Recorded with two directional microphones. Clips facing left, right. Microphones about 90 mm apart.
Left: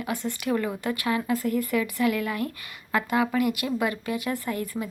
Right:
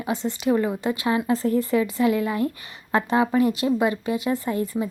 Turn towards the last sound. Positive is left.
turn(degrees=-25)  # may be behind; listen again after turning